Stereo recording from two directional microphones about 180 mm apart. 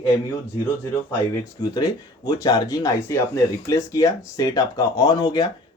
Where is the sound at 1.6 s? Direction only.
20° left (ahead or behind).